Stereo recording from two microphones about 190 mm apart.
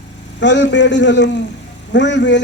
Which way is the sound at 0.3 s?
70° left (ahead or behind).